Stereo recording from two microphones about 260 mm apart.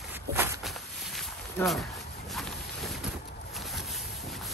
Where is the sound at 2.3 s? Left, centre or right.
Centre.